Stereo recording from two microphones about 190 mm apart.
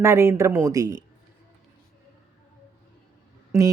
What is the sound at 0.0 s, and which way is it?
Speech, 15° right (ahead or behind).